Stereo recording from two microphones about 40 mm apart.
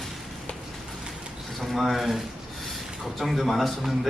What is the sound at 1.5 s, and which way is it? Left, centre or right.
A man's voice, centre.